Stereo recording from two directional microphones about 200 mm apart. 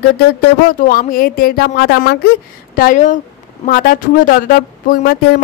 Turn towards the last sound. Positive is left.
turn(degrees=50)  # may be behind; listen again after turning